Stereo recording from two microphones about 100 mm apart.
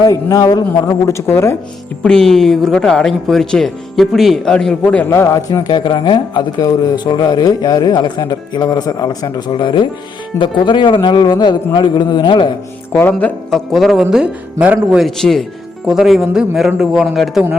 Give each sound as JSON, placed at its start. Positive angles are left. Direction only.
{"t": 0.0, "sound": "a woman's voice", "side_deg": 35}
{"t": 2.0, "sound": "a man's voice", "side_deg": 5}
{"t": 5.0, "sound": "a woman's voice", "side_deg": 30}
{"t": 5.7, "sound": "speech", "side_deg": 55}
{"t": 13.0, "sound": "a man's voice", "side_deg": 20}
{"t": 13.5, "sound": "speech", "side_deg": 0}